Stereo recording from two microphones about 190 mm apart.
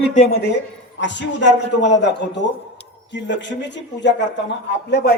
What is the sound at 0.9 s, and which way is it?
A man's voice, 70° left (ahead or behind).